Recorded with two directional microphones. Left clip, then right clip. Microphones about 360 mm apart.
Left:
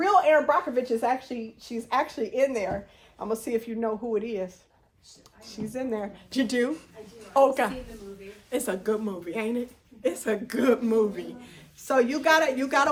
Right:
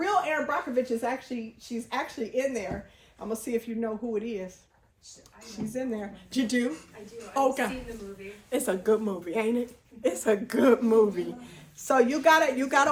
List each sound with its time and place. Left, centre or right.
0.0 s a woman's voice: centre
8.4 s a woman's voice: centre